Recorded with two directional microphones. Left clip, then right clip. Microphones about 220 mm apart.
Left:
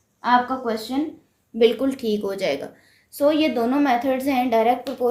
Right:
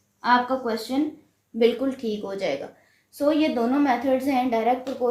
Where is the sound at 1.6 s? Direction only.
45° left (ahead or behind).